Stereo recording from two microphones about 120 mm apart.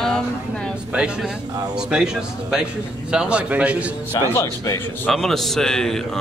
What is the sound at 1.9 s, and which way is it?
A man's voice, 5° right (ahead or behind).